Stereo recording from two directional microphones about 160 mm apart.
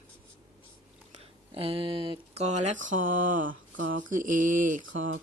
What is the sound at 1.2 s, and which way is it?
Speech, 35° right (ahead or behind).